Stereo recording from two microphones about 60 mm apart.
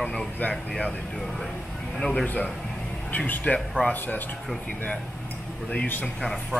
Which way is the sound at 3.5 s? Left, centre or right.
Left.